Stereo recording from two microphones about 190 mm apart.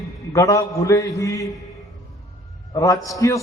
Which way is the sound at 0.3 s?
15° left (ahead or behind).